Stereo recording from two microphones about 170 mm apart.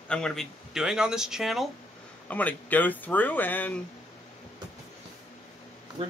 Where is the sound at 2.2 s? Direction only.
10° left (ahead or behind).